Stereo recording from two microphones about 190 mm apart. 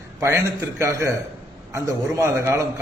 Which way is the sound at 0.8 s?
15° right (ahead or behind).